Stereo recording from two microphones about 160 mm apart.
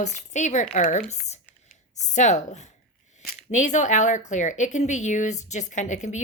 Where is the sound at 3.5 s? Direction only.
50° left (ahead or behind).